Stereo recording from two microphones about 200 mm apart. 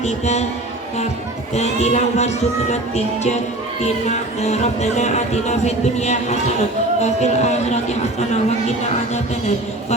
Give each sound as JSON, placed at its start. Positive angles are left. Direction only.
{"t": 0.0, "sound": "speech", "side_deg": 35}
{"t": 1.5, "sound": "speech", "side_deg": 35}